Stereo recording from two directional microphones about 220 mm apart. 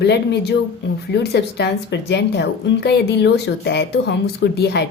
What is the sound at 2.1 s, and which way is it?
Speech, 50° left (ahead or behind).